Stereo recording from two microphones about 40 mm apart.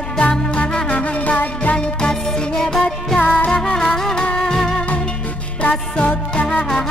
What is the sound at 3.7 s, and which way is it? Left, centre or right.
Music, centre.